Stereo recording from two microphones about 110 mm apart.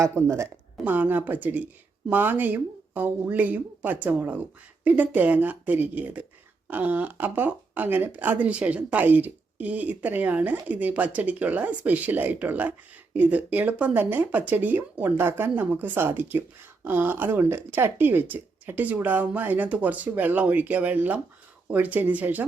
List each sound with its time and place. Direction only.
0.0 s speech: 25° right (ahead or behind)